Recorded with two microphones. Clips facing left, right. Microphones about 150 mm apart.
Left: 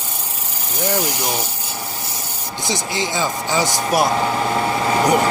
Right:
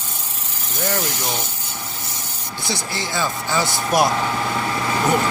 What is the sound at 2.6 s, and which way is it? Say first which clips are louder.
Speech: left 4 dB; 15° left (ahead or behind).